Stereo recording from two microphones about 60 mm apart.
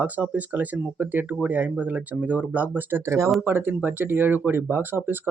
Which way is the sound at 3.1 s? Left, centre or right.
Right.